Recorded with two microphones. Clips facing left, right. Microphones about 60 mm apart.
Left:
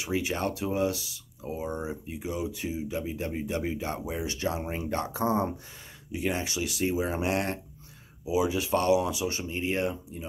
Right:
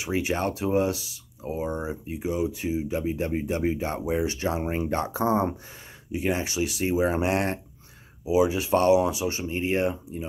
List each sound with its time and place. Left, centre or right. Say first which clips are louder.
0.0 s speech: right 3 dB; right